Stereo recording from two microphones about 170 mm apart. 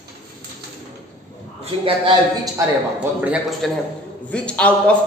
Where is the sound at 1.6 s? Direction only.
30° right (ahead or behind).